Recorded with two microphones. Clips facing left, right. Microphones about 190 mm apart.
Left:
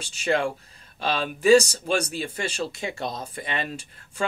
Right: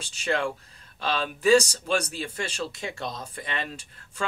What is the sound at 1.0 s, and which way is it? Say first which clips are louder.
Speech: left 3 dB; 10° left (ahead or behind).